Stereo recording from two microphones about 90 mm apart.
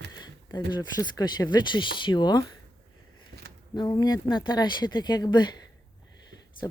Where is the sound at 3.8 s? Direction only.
55° left (ahead or behind).